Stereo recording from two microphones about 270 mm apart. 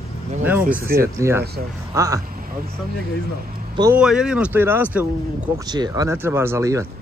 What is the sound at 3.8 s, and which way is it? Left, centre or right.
Speech, centre.